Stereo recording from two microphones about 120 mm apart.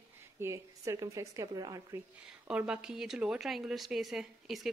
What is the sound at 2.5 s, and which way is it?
Speech, 5° right (ahead or behind).